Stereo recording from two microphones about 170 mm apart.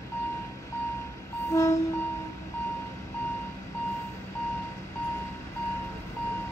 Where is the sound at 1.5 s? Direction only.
20° left (ahead or behind).